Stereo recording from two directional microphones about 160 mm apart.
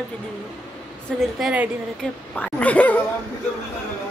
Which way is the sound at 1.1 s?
5° left (ahead or behind).